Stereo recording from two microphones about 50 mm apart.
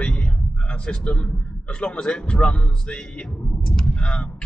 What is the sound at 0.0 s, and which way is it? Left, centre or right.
A man's voice, left.